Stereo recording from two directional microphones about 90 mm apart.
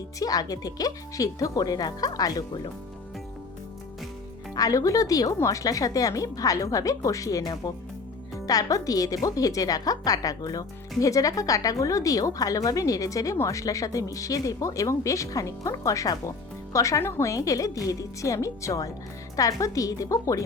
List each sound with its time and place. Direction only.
0.2 s speech: 45° left (ahead or behind)
4.5 s a woman's voice: 40° left (ahead or behind)